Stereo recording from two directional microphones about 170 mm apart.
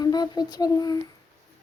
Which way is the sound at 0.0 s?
25° left (ahead or behind).